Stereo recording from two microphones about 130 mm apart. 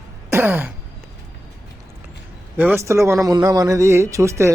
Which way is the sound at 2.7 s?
20° right (ahead or behind).